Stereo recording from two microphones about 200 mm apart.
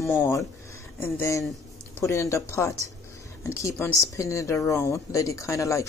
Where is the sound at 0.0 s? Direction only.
15° left (ahead or behind).